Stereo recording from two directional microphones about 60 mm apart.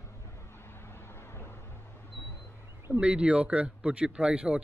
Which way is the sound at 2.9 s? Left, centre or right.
Centre.